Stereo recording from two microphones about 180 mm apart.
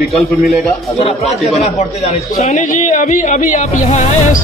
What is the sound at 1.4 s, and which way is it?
Speech, 35° left (ahead or behind).